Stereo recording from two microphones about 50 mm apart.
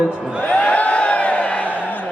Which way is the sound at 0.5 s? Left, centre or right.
Left.